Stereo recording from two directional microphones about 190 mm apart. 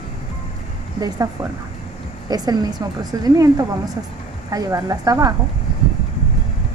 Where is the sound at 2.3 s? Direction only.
20° right (ahead or behind).